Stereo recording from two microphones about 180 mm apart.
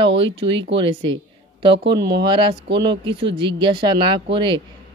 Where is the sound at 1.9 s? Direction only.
65° right (ahead or behind).